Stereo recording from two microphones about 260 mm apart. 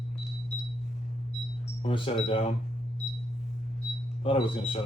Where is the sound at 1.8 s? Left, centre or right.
Left.